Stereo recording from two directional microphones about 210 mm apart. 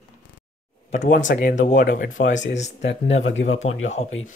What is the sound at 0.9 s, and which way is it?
Speech, 35° left (ahead or behind).